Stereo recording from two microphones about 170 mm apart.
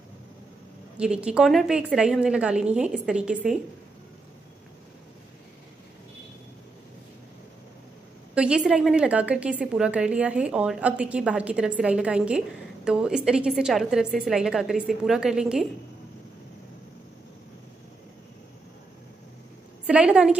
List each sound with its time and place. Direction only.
0.9 s a woman's voice: 5° right (ahead or behind)
8.4 s a woman's voice: 5° right (ahead or behind)
19.9 s a woman's voice: 5° right (ahead or behind)